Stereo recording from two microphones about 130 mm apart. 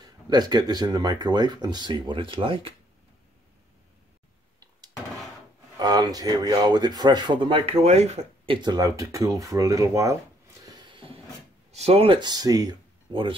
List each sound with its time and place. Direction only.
0.0 s speech: 30° right (ahead or behind)
5.8 s speech: 30° right (ahead or behind); by 8.5 s 55° right (ahead or behind)
8.6 s speech: 30° right (ahead or behind)
10.6 s a sound: 35° right (ahead or behind)
11.7 s speech: 50° right (ahead or behind)